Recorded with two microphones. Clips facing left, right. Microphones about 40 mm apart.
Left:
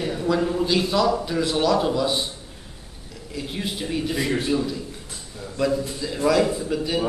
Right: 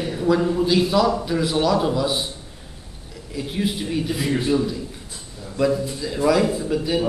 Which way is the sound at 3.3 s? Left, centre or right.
Centre.